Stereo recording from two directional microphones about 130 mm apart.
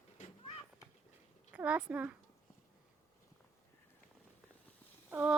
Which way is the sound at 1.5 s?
10° right (ahead or behind).